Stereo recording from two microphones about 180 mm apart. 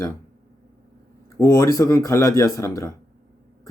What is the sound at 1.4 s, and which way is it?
Speech, 15° left (ahead or behind).